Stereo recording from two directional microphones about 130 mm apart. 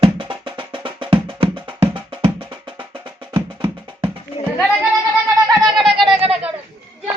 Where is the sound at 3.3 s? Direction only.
20° right (ahead or behind).